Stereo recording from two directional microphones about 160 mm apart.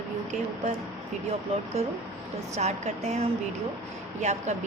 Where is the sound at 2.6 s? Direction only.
45° right (ahead or behind).